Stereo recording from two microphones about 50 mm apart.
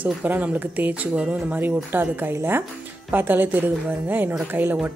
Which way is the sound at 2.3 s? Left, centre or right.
Right.